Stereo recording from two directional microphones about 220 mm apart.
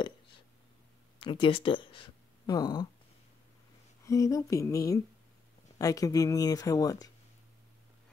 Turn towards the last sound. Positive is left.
turn(degrees=15)  # may be behind; listen again after turning